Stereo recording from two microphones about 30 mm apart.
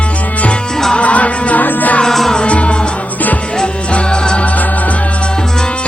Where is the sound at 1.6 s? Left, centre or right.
Left.